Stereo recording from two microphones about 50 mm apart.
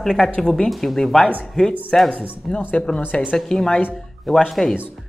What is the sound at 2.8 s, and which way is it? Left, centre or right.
A woman's voice, centre.